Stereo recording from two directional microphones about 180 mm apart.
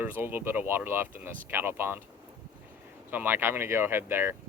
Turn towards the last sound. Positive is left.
turn(degrees=-10)  # may be behind; listen again after turning